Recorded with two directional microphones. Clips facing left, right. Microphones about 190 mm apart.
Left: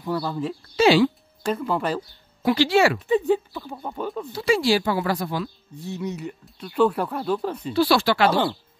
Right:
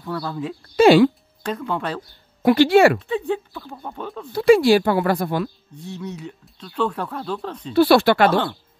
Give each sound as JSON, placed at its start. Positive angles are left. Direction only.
{"t": 0.0, "sound": "speech", "side_deg": 5}
{"t": 0.7, "sound": "speech", "side_deg": -55}
{"t": 1.4, "sound": "speech", "side_deg": 5}
{"t": 2.4, "sound": "speech", "side_deg": -55}
{"t": 3.1, "sound": "speech", "side_deg": 5}
{"t": 4.3, "sound": "speech", "side_deg": -55}
{"t": 5.8, "sound": "speech", "side_deg": 10}
{"t": 7.7, "sound": "speech", "side_deg": -60}